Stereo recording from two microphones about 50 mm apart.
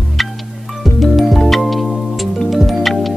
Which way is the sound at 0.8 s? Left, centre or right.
Centre.